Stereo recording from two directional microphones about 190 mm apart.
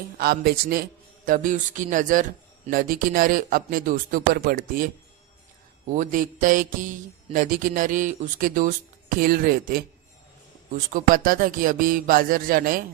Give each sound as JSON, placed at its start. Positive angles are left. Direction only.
{"t": 0.2, "sound": "speech", "side_deg": -55}
{"t": 5.9, "sound": "speech", "side_deg": -40}
{"t": 10.9, "sound": "speech", "side_deg": -45}